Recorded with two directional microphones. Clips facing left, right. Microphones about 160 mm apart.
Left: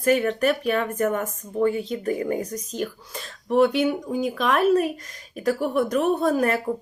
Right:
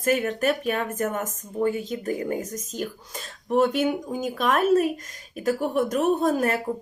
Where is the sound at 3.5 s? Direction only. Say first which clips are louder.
Left 2 dB; 45° right (ahead or behind).